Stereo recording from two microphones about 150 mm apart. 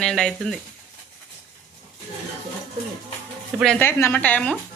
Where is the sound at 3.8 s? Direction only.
15° left (ahead or behind).